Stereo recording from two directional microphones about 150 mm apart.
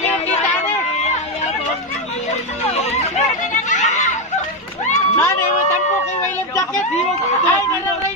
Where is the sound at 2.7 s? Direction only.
45° left (ahead or behind).